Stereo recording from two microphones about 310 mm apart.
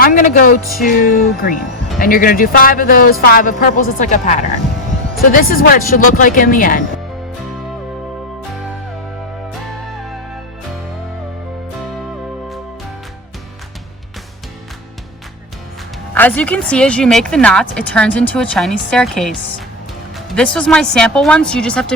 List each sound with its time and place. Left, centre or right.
0.0 s speech: left
16.1 s speech: centre